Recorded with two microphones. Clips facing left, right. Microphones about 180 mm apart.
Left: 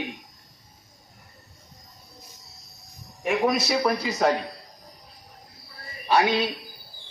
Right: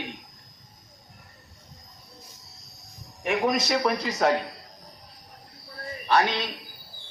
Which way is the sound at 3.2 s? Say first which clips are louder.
Left 1 dB; centre (ahead or behind).